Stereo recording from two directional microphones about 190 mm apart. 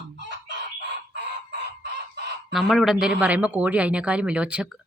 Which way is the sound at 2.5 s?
Centre (ahead or behind).